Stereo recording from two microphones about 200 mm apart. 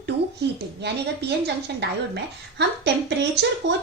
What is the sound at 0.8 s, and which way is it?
Speech, 60° right (ahead or behind).